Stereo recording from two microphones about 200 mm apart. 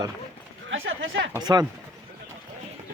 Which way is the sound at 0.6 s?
70° right (ahead or behind).